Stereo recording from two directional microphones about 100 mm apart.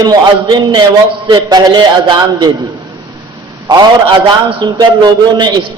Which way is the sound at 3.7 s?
40° right (ahead or behind).